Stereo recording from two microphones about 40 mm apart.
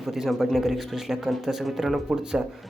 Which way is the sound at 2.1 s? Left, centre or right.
Centre.